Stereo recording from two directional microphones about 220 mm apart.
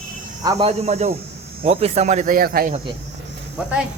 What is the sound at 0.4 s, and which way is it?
Speech, 25° right (ahead or behind).